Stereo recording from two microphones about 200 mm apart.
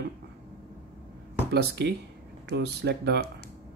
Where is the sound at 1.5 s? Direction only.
55° right (ahead or behind).